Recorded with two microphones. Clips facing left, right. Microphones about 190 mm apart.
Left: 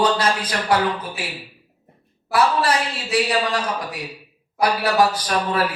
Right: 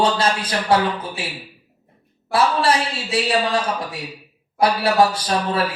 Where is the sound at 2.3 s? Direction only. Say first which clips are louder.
Right 1 dB; 25° right (ahead or behind).